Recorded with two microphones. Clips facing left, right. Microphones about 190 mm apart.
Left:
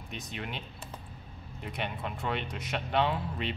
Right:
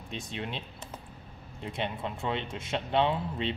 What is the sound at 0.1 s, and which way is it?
Speech, 25° right (ahead or behind).